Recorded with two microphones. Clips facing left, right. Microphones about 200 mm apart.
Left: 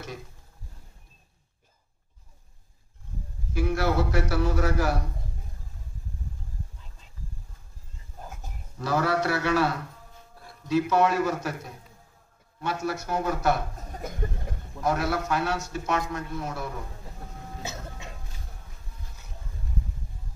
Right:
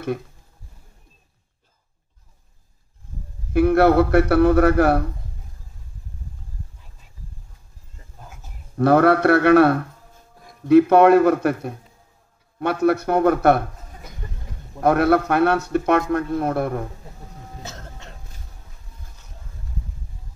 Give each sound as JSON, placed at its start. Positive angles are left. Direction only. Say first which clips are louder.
{"t": 3.5, "sound": "a man's voice", "louder": "right 11 dB", "side_deg": -60}
{"t": 8.7, "sound": "a man's voice", "louder": "right 11 dB", "side_deg": -60}
{"t": 14.8, "sound": "a man's voice", "louder": "right 10 dB", "side_deg": -60}
{"t": 17.6, "sound": "throat clearing", "louder": "left 3 dB", "side_deg": 10}